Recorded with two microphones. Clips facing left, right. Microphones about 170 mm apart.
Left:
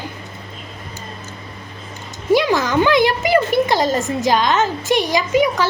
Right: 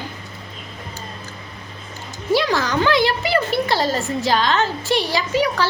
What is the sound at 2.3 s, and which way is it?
A woman's voice, 15° left (ahead or behind).